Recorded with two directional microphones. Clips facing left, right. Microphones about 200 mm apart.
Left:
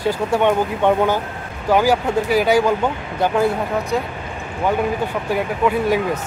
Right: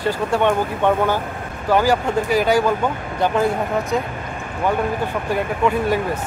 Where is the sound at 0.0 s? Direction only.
10° left (ahead or behind).